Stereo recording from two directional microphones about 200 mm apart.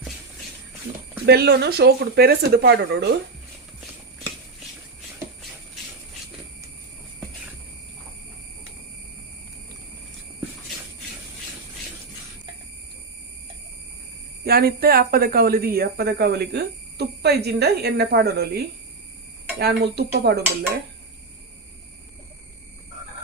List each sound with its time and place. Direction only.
1.2 s speech: 55° right (ahead or behind)
14.4 s speech: 50° right (ahead or behind)